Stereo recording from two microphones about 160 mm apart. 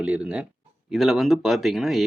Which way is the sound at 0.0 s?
5° right (ahead or behind).